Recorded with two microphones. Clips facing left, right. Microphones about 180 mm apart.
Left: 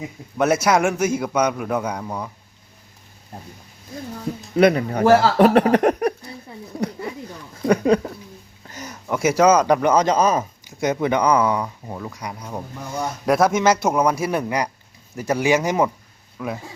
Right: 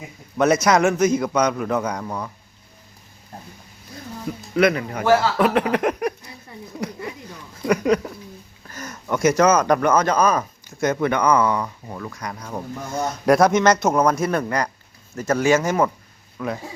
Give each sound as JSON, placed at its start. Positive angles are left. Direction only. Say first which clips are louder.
{"t": 0.3, "sound": "speech", "louder": "right 1 dB", "side_deg": 5}
{"t": 4.5, "sound": "speech", "louder": "left 3 dB", "side_deg": 30}
{"t": 6.7, "sound": "a sound", "louder": "left 3 dB", "side_deg": 35}
{"t": 7.7, "sound": "speech", "louder": "left 2 dB", "side_deg": 30}
{"t": 8.6, "sound": "a sound", "louder": "even", "side_deg": 15}
{"t": 9.0, "sound": "speech", "louder": "left 1 dB", "side_deg": 5}